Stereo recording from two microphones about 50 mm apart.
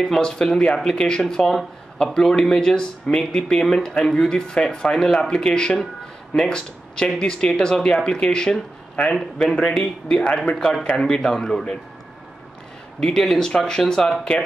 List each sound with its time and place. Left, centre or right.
0.0 s speech: centre
9.1 s speech: centre
13.0 s speech: centre